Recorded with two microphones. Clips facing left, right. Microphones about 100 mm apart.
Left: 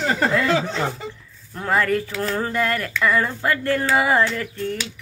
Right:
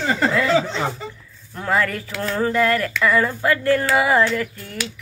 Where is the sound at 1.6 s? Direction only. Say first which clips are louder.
Left 1 dB; 30° left (ahead or behind).